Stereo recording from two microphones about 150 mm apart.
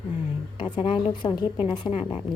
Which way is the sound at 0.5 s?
35° left (ahead or behind).